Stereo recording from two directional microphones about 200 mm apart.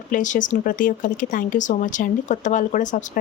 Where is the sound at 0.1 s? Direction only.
40° left (ahead or behind).